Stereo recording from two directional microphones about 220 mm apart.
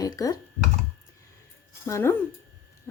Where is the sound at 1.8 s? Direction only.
10° left (ahead or behind).